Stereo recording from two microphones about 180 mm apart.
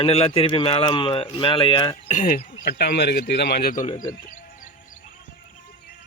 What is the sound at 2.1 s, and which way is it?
Speech, 45° left (ahead or behind).